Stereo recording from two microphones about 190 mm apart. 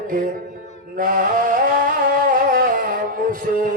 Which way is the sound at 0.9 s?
50° right (ahead or behind).